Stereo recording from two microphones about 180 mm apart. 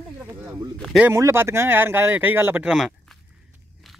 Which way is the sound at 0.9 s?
15° right (ahead or behind).